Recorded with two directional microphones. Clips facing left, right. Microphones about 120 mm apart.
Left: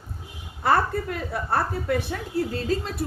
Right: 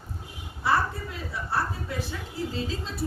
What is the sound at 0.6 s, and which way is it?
A woman's voice, 60° left (ahead or behind).